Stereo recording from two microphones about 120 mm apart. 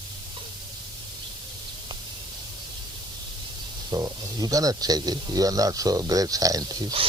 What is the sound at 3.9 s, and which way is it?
Speech, 30° right (ahead or behind).